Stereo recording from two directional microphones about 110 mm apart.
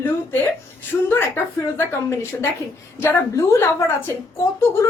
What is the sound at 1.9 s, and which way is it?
A woman's voice, 25° left (ahead or behind).